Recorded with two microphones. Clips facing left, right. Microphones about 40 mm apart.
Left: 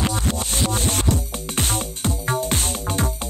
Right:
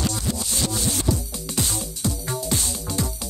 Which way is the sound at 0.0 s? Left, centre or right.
Left.